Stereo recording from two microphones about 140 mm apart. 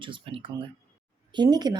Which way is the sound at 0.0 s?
40° right (ahead or behind).